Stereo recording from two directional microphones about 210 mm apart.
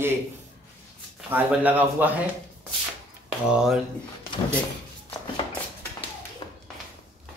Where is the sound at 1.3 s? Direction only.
10° right (ahead or behind).